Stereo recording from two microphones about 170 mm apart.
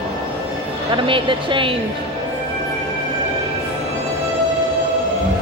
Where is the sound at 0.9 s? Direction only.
30° right (ahead or behind).